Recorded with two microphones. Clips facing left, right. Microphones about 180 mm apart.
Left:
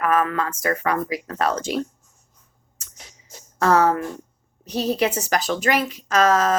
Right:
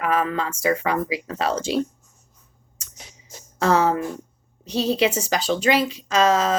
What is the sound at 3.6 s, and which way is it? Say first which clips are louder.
Speech: left 1 dB; 25° right (ahead or behind).